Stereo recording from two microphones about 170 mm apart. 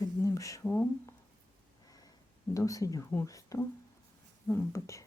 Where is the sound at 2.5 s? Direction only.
20° left (ahead or behind).